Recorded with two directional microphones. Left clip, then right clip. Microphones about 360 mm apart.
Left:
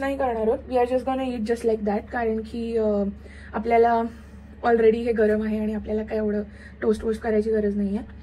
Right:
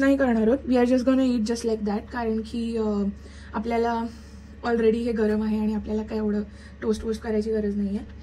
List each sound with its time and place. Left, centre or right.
0.2 s a woman's voice: right; by 8.0 s centre